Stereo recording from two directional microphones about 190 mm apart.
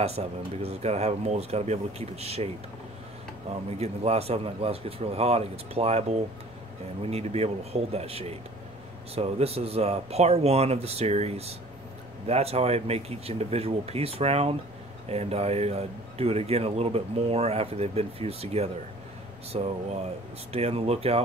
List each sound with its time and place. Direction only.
0.0 s speech: 30° right (ahead or behind)
3.7 s speech: 35° right (ahead or behind)